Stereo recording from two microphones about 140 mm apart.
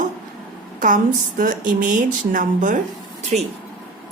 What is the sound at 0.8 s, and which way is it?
A woman's voice, 70° right (ahead or behind).